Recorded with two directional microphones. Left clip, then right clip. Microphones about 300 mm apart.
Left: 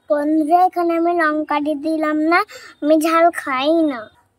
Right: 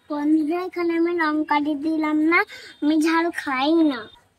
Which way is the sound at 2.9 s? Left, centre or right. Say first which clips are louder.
Left 7 dB; centre.